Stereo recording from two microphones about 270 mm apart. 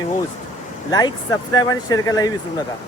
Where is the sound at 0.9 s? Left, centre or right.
Centre.